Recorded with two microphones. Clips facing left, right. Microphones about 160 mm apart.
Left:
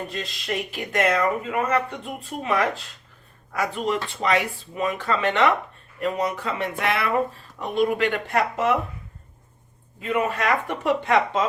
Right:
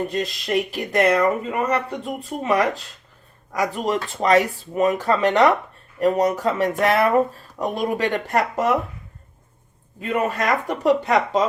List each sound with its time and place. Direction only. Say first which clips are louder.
0.1 s speech: right 7 dB; 40° right (ahead or behind)
10.1 s speech: right 1 dB; 45° right (ahead or behind)